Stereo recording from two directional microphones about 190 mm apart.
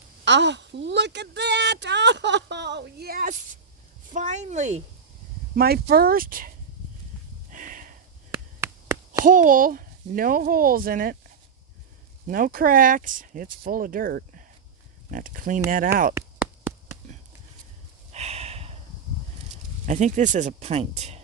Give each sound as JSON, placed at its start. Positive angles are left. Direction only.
{"t": 0.3, "sound": "speech", "side_deg": -65}
{"t": 4.1, "sound": "speech", "side_deg": -40}
{"t": 5.5, "sound": "speech", "side_deg": -55}
{"t": 7.5, "sound": "a sound", "side_deg": -45}
{"t": 8.6, "sound": "a sound", "side_deg": -15}
{"t": 9.2, "sound": "speech", "side_deg": -45}
{"t": 12.3, "sound": "speech", "side_deg": -50}
{"t": 18.1, "sound": "a sound", "side_deg": -35}
{"t": 19.8, "sound": "speech", "side_deg": -40}